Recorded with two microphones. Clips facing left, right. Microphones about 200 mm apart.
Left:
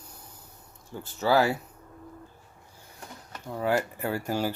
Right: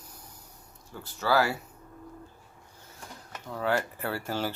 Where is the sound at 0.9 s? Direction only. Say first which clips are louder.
Left 3 dB; 15° left (ahead or behind).